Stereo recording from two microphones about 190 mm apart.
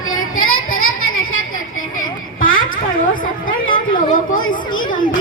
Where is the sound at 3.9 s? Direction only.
45° left (ahead or behind).